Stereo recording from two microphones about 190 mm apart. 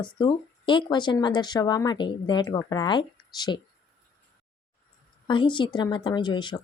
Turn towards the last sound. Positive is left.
turn(degrees=25)  # may be behind; listen again after turning